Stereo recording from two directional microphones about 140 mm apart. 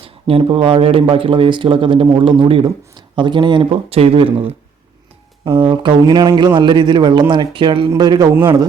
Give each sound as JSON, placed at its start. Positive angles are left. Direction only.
{"t": 0.0, "sound": "speech", "side_deg": -40}